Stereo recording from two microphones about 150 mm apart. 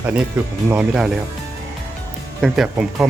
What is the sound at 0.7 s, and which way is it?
Speech, 5° right (ahead or behind).